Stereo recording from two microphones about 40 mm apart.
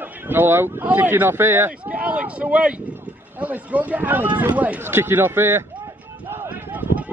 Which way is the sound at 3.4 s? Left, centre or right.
Right.